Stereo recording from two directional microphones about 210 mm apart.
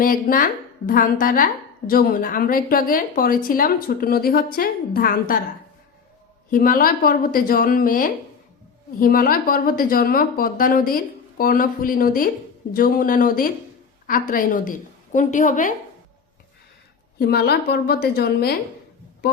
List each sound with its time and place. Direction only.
0.0 s a woman's voice: 40° left (ahead or behind)
6.5 s a woman's voice: 40° left (ahead or behind)
17.2 s a woman's voice: 50° left (ahead or behind)